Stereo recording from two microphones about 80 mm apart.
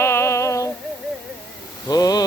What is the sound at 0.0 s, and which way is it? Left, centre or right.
Synthetic singing, left.